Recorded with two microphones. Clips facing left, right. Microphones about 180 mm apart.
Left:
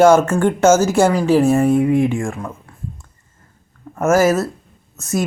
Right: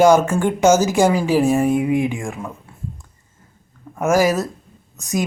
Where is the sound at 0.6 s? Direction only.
15° right (ahead or behind).